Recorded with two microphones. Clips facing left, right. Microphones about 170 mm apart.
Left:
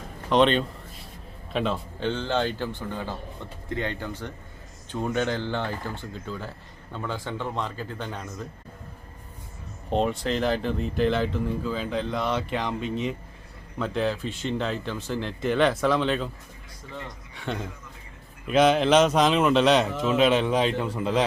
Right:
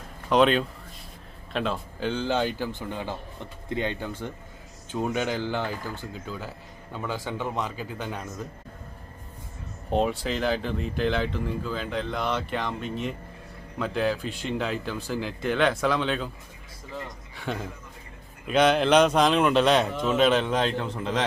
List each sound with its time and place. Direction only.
0.3 s a man's voice: 5° right (ahead or behind)
9.9 s a man's voice: 5° right (ahead or behind)